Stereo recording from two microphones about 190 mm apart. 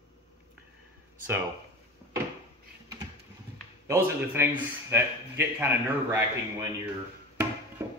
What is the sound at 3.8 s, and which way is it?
Speech, 15° right (ahead or behind).